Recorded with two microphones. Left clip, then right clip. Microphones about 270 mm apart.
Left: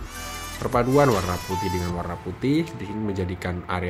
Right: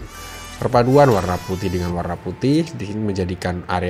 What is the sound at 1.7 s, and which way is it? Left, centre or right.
Speech, centre.